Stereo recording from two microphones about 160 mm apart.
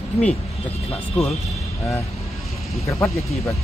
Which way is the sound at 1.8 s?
20° left (ahead or behind).